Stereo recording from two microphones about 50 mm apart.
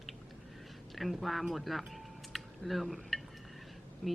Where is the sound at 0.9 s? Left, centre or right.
Centre.